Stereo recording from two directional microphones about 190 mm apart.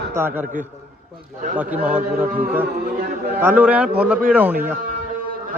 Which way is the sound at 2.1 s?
5° right (ahead or behind).